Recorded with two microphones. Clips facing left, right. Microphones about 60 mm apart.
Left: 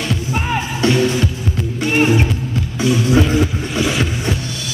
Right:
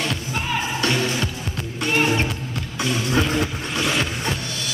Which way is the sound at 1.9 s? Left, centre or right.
Centre.